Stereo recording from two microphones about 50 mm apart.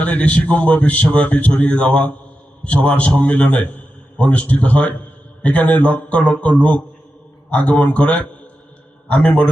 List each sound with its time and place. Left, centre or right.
0.0 s a man's voice: left